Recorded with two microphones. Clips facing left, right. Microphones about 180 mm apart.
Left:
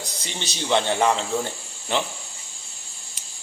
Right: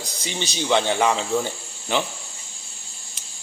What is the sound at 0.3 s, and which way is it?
Speech, centre (ahead or behind).